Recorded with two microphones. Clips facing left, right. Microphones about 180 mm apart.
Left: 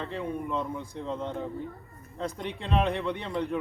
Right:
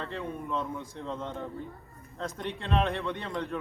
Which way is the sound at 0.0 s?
15° left (ahead or behind).